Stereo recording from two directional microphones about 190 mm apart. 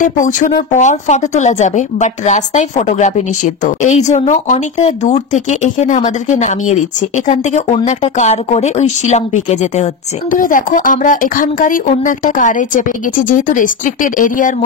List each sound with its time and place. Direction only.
0.0 s speech: 40° left (ahead or behind)